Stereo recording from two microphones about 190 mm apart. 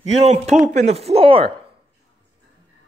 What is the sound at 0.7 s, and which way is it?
Speech, 35° right (ahead or behind).